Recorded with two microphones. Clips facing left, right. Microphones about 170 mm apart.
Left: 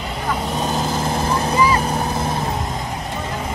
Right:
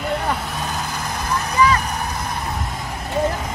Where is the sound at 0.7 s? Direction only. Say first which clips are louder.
Left 6 dB; 25° left (ahead or behind).